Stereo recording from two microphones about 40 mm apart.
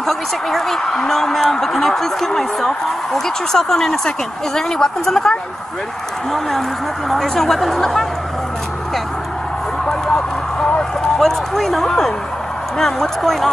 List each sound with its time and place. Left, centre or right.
0.0 s a woman's voice: centre
7.1 s a woman's voice: centre
9.8 s a sound: centre
10.8 s a woman's voice: centre